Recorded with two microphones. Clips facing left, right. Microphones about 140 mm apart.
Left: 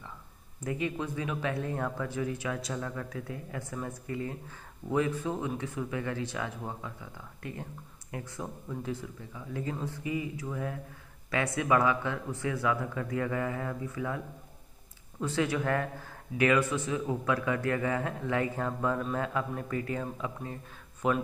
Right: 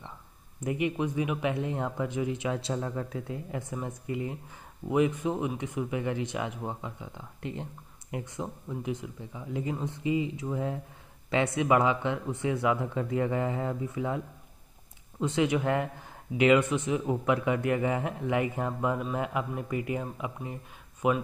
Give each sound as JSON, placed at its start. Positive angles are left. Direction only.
{"t": 0.7, "sound": "speech", "side_deg": -20}